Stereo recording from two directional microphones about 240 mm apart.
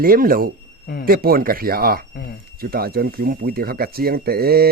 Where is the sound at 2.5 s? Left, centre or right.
Right.